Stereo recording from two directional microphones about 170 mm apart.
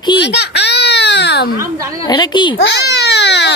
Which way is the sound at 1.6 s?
20° right (ahead or behind).